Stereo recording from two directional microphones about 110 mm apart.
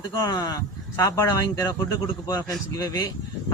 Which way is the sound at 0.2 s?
35° left (ahead or behind).